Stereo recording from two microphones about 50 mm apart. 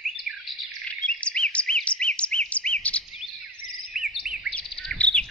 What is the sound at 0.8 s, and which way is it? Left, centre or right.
Bird vocalization, left.